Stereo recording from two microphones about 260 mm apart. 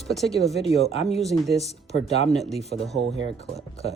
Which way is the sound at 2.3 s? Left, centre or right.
Centre.